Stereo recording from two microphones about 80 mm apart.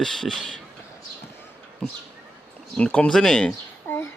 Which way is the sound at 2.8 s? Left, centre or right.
Centre.